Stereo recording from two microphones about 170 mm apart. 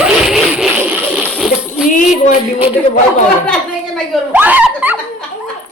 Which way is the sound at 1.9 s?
50° left (ahead or behind).